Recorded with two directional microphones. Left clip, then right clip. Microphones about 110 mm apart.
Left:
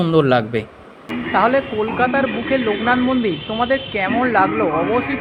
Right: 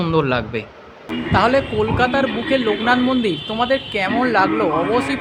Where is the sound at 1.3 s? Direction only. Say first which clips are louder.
Even; 30° right (ahead or behind).